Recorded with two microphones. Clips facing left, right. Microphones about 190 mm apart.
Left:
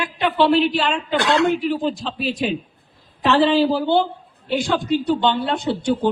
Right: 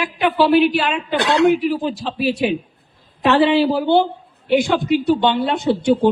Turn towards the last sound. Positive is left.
turn(degrees=-15)  # may be behind; listen again after turning